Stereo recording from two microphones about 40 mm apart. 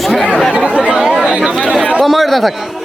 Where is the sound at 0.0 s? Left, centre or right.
Centre.